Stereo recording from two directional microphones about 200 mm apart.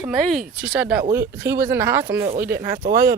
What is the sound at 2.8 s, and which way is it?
Speech, 45° right (ahead or behind).